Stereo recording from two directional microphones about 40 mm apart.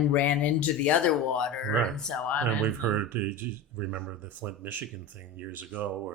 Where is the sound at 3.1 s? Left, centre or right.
Right.